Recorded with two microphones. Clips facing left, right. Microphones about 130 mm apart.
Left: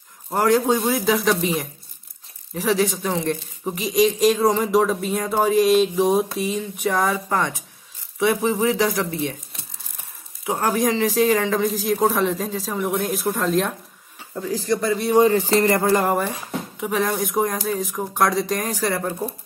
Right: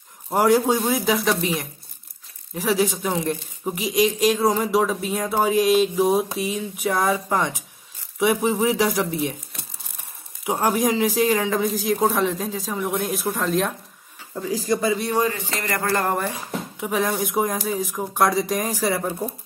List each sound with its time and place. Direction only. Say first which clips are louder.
0.3 s speech: even; 10° right (ahead or behind)
10.4 s speech: even; 10° right (ahead or behind)
15.3 s speech: left 10 dB; 35° left (ahead or behind)
16.0 s speech: left 2 dB; 5° left (ahead or behind)